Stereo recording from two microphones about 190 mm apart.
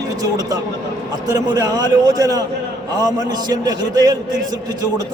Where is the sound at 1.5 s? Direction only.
20° right (ahead or behind).